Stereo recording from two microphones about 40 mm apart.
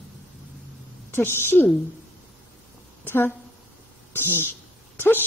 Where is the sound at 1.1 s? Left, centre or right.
Left.